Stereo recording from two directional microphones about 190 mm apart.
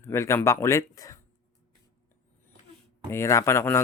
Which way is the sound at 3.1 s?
15° left (ahead or behind).